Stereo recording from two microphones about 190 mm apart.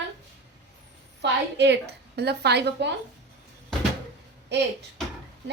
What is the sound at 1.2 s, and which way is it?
A woman's voice, 65° right (ahead or behind).